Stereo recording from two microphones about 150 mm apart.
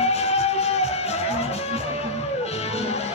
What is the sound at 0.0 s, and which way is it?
Music, 45° left (ahead or behind).